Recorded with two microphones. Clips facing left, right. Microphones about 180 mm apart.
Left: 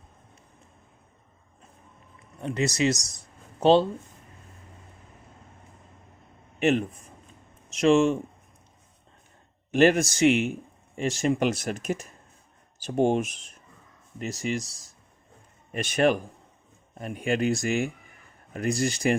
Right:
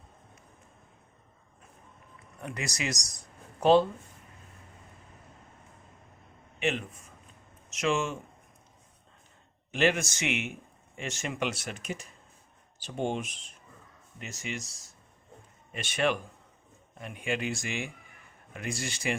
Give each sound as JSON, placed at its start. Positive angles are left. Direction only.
{"t": 2.4, "sound": "speech", "side_deg": 25}
{"t": 6.6, "sound": "speech", "side_deg": 40}
{"t": 9.7, "sound": "speech", "side_deg": 40}